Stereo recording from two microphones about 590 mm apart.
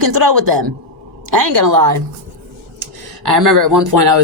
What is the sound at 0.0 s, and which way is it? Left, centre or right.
Speech, right.